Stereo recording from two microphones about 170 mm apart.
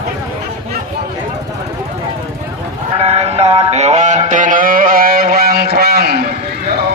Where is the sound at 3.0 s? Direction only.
40° right (ahead or behind).